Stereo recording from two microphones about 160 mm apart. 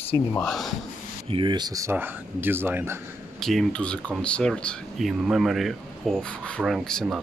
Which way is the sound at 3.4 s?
Centre (ahead or behind).